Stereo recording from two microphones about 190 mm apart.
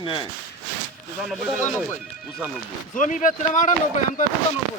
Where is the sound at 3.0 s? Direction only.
40° left (ahead or behind).